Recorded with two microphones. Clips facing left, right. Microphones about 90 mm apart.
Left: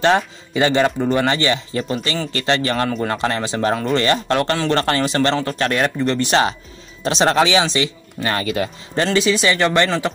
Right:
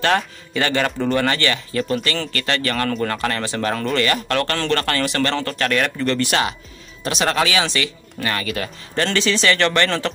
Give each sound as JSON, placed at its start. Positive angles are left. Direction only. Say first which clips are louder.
{"t": 0.0, "sound": "speech", "louder": "left 3 dB", "side_deg": 20}
{"t": 5.7, "sound": "speech", "louder": "even", "side_deg": 30}
{"t": 5.9, "sound": "speech", "louder": "left 3 dB", "side_deg": 20}